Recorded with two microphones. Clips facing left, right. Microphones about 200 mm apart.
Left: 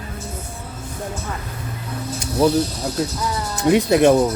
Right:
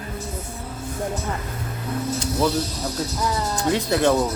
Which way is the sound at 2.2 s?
15° left (ahead or behind).